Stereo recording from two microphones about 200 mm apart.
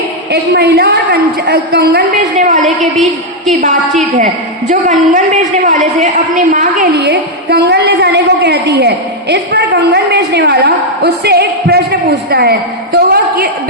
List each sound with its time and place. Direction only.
0.3 s a woman's voice: 55° right (ahead or behind)
2.6 s a woman's voice: centre (ahead or behind)
4.7 s a woman's voice: 40° right (ahead or behind)
6.9 s a woman's voice: 55° right (ahead or behind)